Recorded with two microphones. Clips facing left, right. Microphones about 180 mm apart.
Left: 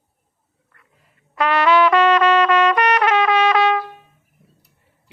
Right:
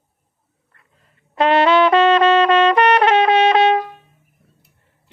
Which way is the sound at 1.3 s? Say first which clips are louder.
Right 3 dB; 25° right (ahead or behind).